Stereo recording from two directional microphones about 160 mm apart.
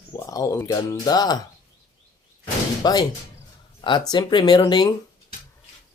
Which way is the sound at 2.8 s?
25° left (ahead or behind).